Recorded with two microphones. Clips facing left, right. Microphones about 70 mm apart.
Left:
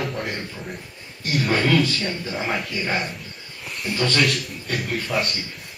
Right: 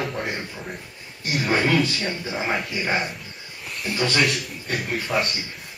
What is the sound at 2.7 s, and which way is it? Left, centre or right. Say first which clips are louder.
Speech: right 1 dB; centre.